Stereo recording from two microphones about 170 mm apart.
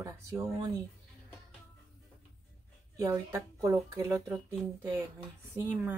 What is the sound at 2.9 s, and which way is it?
Speech, 20° right (ahead or behind).